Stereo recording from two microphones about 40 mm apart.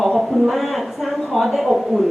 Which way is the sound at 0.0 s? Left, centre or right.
Centre.